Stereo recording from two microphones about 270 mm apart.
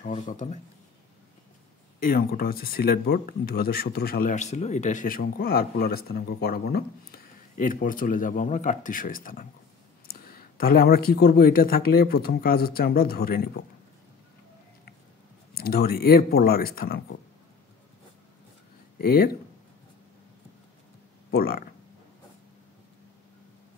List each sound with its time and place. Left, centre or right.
0.0 s speech: left
2.0 s speech: left
15.5 s speech: left
18.9 s speech: left
21.3 s speech: left